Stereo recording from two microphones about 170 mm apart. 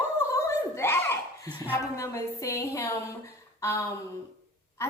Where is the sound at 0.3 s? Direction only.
15° left (ahead or behind).